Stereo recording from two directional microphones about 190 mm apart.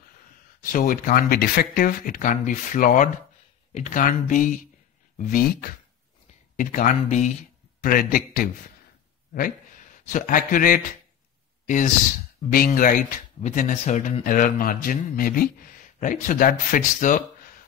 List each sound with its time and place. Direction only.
0.6 s a man's voice: 45° left (ahead or behind)